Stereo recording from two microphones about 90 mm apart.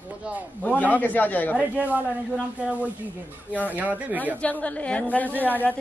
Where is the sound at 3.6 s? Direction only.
20° right (ahead or behind).